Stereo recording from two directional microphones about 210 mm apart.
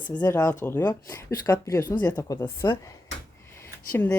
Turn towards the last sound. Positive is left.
turn(degrees=10)  # may be behind; listen again after turning